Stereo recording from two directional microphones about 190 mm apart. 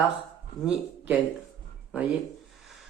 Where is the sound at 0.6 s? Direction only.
20° left (ahead or behind).